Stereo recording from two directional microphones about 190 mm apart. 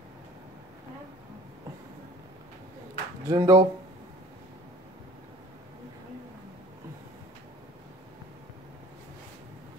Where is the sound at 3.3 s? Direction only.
20° right (ahead or behind).